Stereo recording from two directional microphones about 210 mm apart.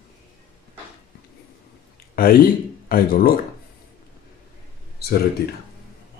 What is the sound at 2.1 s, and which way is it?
Speech, 45° left (ahead or behind).